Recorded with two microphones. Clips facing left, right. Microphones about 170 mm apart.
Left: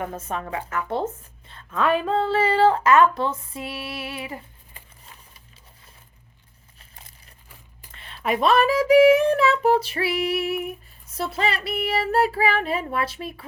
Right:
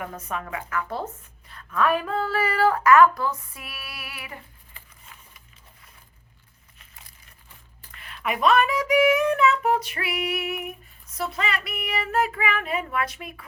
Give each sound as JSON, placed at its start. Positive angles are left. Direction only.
{"t": 0.0, "sound": "speech", "side_deg": 30}
{"t": 7.9, "sound": "speech", "side_deg": 30}